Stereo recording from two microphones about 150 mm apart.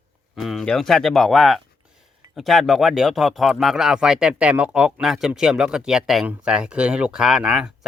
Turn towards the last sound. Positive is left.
turn(degrees=-5)  # may be behind; listen again after turning